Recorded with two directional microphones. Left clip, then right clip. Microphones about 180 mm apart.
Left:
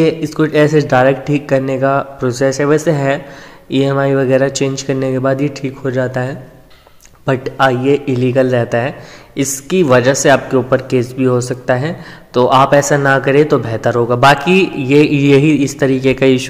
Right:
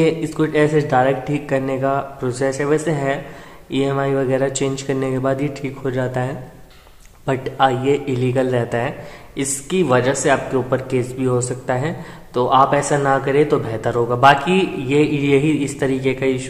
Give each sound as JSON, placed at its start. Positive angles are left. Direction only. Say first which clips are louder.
{"t": 0.0, "sound": "speech", "louder": "left 4 dB", "side_deg": 15}